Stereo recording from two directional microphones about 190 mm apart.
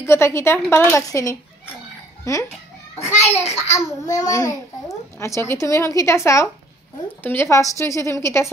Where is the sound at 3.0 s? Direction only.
35° left (ahead or behind).